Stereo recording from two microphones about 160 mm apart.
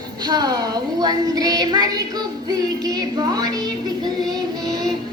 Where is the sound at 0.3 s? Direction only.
25° right (ahead or behind).